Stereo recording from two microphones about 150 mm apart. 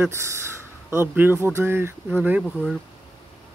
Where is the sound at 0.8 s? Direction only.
15° right (ahead or behind).